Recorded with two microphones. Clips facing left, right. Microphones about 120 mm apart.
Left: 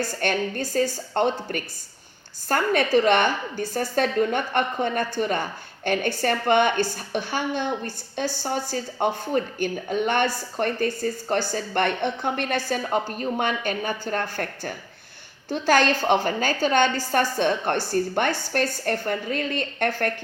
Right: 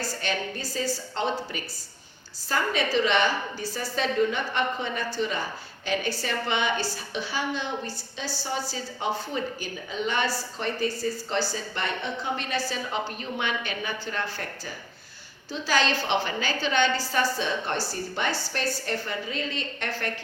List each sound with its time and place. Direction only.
0.0 s speech: 55° left (ahead or behind)